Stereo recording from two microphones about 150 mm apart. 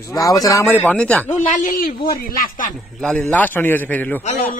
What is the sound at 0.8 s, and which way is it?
Speech, 10° left (ahead or behind).